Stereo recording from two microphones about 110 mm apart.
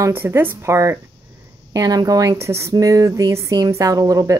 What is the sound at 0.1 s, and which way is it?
Speech, 20° right (ahead or behind).